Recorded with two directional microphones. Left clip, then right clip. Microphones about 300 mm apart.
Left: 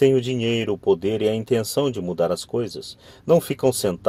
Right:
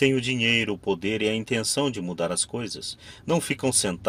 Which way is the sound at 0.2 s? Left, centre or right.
Left.